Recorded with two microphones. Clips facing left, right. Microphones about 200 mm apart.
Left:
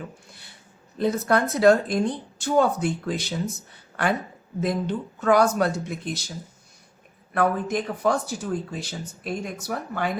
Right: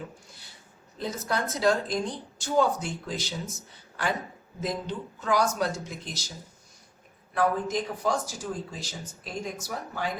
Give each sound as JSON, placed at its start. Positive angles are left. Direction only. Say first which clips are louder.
{"t": 0.9, "sound": "speech", "louder": "left 9 dB", "side_deg": 60}
{"t": 7.3, "sound": "speech", "louder": "left 3 dB", "side_deg": 60}